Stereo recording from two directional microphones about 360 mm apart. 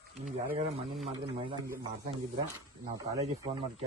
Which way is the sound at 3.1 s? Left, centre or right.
Centre.